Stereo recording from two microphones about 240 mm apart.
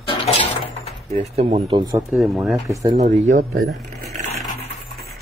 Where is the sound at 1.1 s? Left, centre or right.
Right.